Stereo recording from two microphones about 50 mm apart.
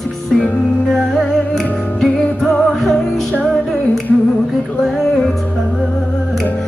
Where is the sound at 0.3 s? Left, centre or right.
Centre.